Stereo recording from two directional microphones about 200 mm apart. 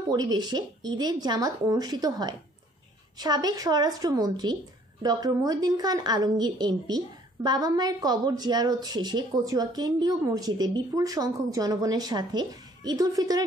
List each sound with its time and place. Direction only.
0.1 s a woman's voice: 20° right (ahead or behind)